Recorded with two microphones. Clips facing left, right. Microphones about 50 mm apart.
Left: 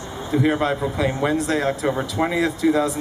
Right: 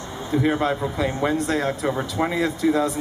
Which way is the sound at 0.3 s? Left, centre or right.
Centre.